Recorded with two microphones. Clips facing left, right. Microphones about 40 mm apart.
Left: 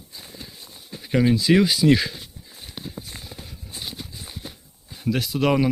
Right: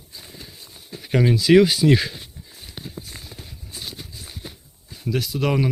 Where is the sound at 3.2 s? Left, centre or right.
Centre.